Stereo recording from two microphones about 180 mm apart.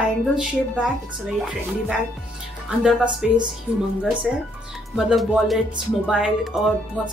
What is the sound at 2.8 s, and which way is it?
Speech, 5° right (ahead or behind).